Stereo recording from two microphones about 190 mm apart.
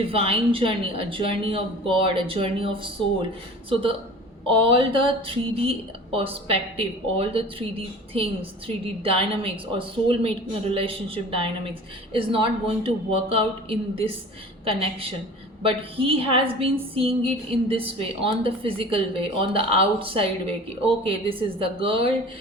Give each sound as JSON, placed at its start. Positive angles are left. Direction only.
{"t": 0.0, "sound": "a woman's voice", "side_deg": -30}